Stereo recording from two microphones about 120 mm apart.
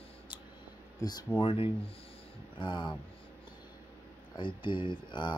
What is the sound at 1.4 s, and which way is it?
Speech, 50° left (ahead or behind).